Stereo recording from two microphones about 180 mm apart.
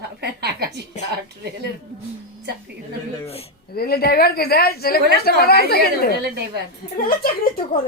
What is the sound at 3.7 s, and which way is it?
Speech, 60° left (ahead or behind).